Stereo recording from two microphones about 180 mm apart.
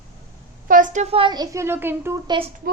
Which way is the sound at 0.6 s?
50° right (ahead or behind).